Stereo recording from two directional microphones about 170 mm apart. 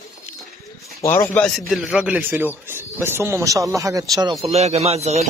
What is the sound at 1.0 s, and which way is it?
Speech, 20° left (ahead or behind).